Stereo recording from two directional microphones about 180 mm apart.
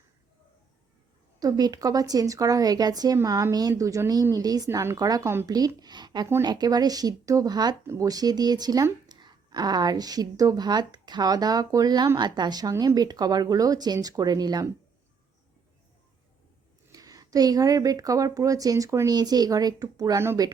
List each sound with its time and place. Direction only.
1.4 s speech: 20° right (ahead or behind)
16.9 s speech: 20° right (ahead or behind)